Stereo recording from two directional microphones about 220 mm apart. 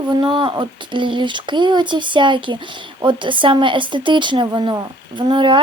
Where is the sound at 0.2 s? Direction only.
25° right (ahead or behind).